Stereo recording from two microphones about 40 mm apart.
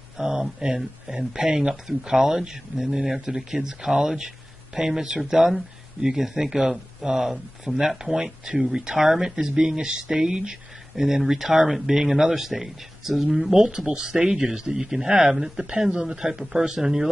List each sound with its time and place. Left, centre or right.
0.2 s speech: centre
13.6 s speech: centre